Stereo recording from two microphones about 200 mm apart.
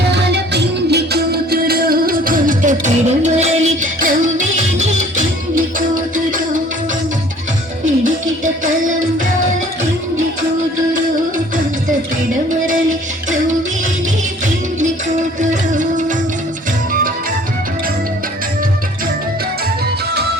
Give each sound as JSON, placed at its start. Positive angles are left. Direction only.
{"t": 0.1, "sound": "music", "side_deg": -60}
{"t": 12.6, "sound": "music", "side_deg": -40}
{"t": 15.4, "sound": "music", "side_deg": -40}